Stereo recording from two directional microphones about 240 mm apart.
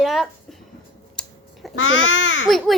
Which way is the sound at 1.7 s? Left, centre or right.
Left.